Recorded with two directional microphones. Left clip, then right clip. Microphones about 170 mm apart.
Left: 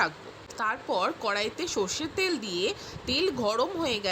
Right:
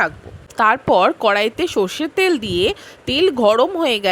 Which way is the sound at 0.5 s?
55° right (ahead or behind).